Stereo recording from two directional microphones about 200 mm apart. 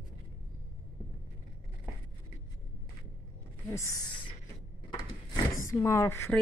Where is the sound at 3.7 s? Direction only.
15° left (ahead or behind).